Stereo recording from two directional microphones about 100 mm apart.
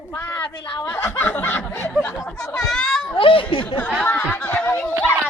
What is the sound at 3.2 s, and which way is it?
Speech, 60° left (ahead or behind).